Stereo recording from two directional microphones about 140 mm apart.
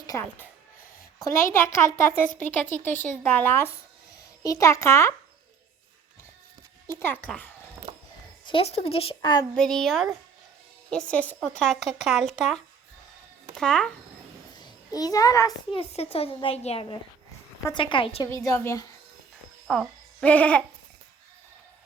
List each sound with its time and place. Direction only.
0.1 s a child's voice: 15° left (ahead or behind)
7.0 s speech: 15° left (ahead or behind)
8.4 s speech: 45° left (ahead or behind)
9.6 s a woman's voice: 5° left (ahead or behind)
11.1 s a woman's voice: 10° left (ahead or behind)
13.6 s a woman's voice: 5° left (ahead or behind)
14.6 s a child's voice: 25° left (ahead or behind)
15.7 s a woman's voice: 45° left (ahead or behind)
18.3 s a child's voice: 20° left (ahead or behind)
19.6 s speech: centre (ahead or behind)